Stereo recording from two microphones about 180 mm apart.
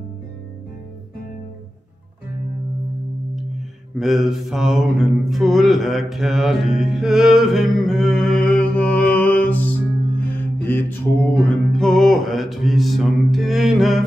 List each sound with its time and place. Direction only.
4.0 s mantra: centre (ahead or behind)